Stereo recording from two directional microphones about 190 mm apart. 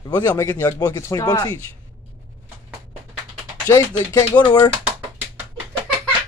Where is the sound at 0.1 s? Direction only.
10° left (ahead or behind).